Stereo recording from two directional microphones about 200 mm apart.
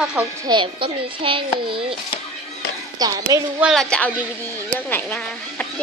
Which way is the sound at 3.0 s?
20° right (ahead or behind).